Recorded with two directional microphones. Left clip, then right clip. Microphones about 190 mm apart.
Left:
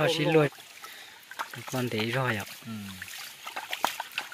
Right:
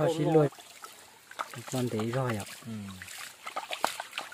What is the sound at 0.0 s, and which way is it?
Speech, 15° right (ahead or behind).